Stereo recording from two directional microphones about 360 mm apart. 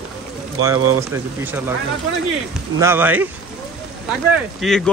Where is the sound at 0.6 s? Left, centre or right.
Centre.